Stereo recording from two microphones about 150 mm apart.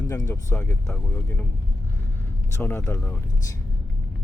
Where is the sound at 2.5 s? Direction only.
15° left (ahead or behind).